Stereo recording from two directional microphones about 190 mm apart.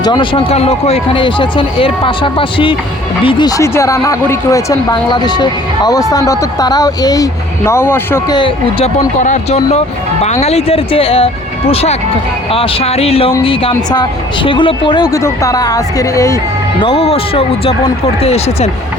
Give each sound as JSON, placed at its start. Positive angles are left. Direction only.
{"t": 0.0, "sound": "a woman's voice", "side_deg": 25}
{"t": 8.4, "sound": "a woman's voice", "side_deg": 25}
{"t": 9.2, "sound": "a woman's voice", "side_deg": 35}
{"t": 16.8, "sound": "speech", "side_deg": 30}